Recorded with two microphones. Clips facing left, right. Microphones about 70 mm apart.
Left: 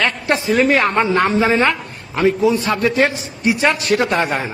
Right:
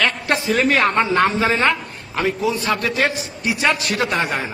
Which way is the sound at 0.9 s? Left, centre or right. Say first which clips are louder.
Left 2 dB; centre.